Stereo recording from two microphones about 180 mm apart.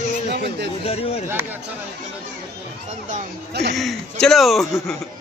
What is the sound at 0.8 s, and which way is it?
Speech, 35° left (ahead or behind).